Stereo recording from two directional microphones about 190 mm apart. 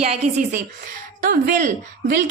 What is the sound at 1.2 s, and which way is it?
Speech, 50° right (ahead or behind).